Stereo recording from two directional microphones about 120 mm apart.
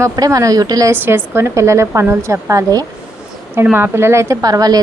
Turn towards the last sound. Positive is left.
turn(degrees=-30)  # may be behind; listen again after turning